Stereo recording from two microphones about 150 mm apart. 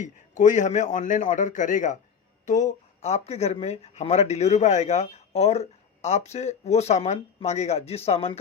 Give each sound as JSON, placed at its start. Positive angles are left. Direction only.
{"t": 0.0, "sound": "a man's voice", "side_deg": 55}